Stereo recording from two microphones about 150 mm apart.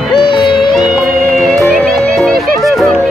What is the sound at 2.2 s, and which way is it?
Music, centre (ahead or behind).